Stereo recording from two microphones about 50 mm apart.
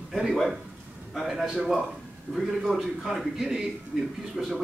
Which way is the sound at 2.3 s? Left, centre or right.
Left.